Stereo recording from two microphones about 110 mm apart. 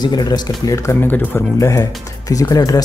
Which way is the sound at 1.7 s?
30° left (ahead or behind).